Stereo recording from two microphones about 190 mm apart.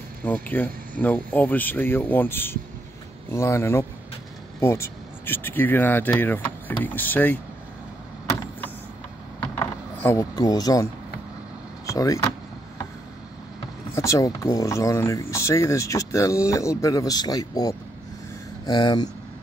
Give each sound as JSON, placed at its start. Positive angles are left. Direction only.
{"t": 0.2, "sound": "speech", "side_deg": 10}
{"t": 9.4, "sound": "a sound", "side_deg": 15}
{"t": 11.8, "sound": "speech", "side_deg": 15}
{"t": 13.9, "sound": "speech", "side_deg": 15}